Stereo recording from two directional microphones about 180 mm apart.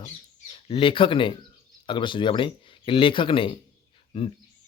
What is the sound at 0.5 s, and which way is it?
Speech, 30° left (ahead or behind).